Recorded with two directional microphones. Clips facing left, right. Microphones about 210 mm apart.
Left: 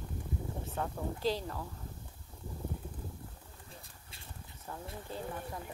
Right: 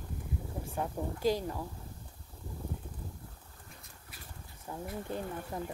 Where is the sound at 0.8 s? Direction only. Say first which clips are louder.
Right 2 dB; 10° right (ahead or behind).